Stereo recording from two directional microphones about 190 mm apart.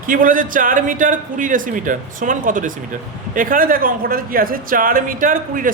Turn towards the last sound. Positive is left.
turn(degrees=-45)  # may be behind; listen again after turning